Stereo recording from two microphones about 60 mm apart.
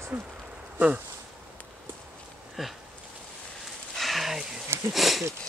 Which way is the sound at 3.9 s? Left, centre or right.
Centre.